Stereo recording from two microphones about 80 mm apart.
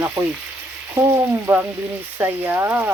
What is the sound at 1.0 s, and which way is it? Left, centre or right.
Speech, right.